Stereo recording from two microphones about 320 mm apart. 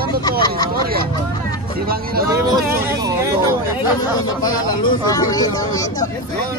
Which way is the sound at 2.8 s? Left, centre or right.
Centre.